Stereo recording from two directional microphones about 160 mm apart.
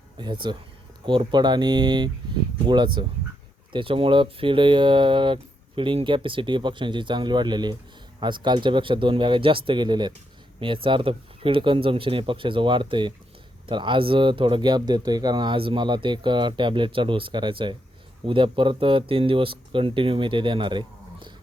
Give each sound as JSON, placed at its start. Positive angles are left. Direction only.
{"t": 0.2, "sound": "speech", "side_deg": -30}